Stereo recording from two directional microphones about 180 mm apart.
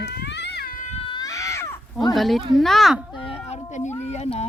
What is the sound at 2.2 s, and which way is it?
Speech, centre (ahead or behind).